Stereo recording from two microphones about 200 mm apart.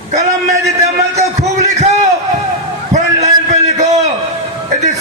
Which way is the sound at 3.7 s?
35° right (ahead or behind).